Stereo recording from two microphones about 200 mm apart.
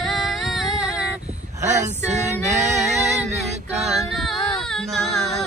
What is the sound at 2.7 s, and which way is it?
Female singing, centre (ahead or behind).